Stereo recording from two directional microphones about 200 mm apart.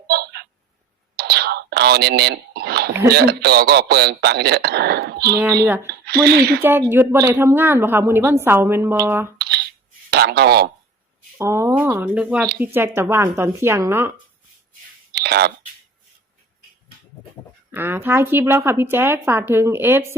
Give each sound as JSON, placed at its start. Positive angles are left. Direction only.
{"t": 0.1, "sound": "a sound", "side_deg": -55}
{"t": 1.1, "sound": "whispering", "side_deg": -55}
{"t": 3.1, "sound": "a man's voice", "side_deg": -55}
{"t": 6.6, "sound": "a woman's voice", "side_deg": -10}
{"t": 10.1, "sound": "speech", "side_deg": -55}
{"t": 11.3, "sound": "a woman's voice", "side_deg": -15}
{"t": 15.1, "sound": "a sound", "side_deg": -55}
{"t": 17.7, "sound": "a woman's voice", "side_deg": -10}